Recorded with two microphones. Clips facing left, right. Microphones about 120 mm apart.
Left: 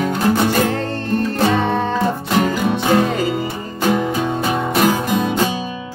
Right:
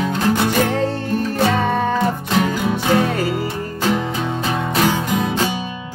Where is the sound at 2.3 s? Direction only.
15° left (ahead or behind).